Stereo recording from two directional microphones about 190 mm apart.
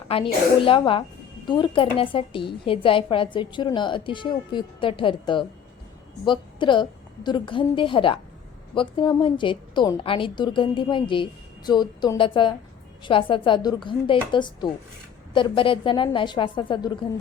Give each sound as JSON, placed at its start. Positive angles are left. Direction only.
{"t": 0.1, "sound": "a woman's voice", "side_deg": 30}